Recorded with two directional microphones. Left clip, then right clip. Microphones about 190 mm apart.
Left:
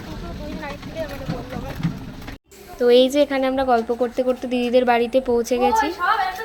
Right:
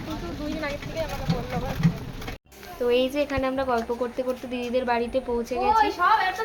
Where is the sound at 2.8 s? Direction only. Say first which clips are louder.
Left 8 dB; 30° left (ahead or behind).